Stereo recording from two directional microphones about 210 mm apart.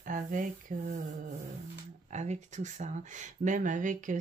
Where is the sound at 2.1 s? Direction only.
35° right (ahead or behind).